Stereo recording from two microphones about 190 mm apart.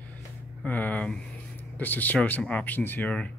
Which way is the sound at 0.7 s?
10° left (ahead or behind).